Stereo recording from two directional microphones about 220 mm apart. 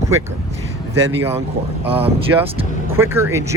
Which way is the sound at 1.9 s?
25° right (ahead or behind).